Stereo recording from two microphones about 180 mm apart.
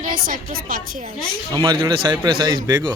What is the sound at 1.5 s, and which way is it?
A man's voice, 25° right (ahead or behind).